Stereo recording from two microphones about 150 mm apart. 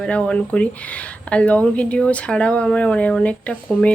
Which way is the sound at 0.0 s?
5° left (ahead or behind).